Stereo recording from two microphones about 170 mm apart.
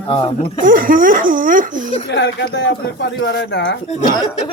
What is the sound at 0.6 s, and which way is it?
Speech, 55° right (ahead or behind).